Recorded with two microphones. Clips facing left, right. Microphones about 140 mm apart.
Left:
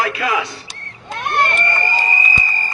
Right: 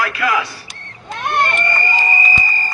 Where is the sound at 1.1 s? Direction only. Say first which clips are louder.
Even; centre (ahead or behind).